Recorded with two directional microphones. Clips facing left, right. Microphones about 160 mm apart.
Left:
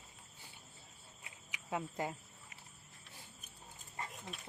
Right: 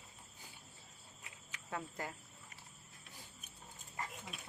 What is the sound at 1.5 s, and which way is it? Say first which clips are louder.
Speech: left 4 dB; 15° left (ahead or behind).